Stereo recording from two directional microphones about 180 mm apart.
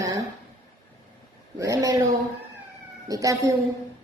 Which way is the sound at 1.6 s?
20° right (ahead or behind).